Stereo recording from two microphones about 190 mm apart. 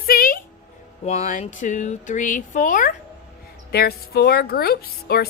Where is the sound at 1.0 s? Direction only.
35° left (ahead or behind); by 5.2 s 55° left (ahead or behind).